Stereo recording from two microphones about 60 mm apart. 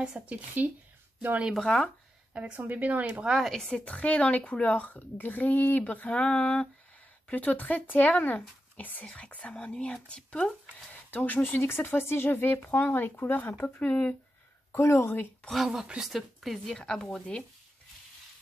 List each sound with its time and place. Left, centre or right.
0.0 s speech: centre
1.6 s a woman's voice: centre
2.3 s speech: right
3.3 s speech: centre
3.5 s a woman's voice: centre
3.8 s a child's voice: left
11.2 s a child's voice: left
14.8 s speech: left
15.5 s speech: centre
16.7 s a woman's voice: centre